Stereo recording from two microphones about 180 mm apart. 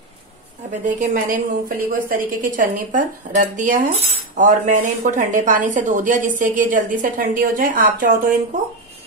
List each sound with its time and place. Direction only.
0.7 s a woman's voice: 45° right (ahead or behind)